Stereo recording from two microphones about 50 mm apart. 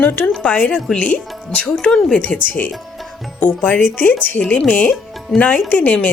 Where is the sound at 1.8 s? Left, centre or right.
Centre.